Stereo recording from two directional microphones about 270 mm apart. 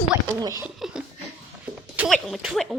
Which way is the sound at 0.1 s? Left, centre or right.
Centre.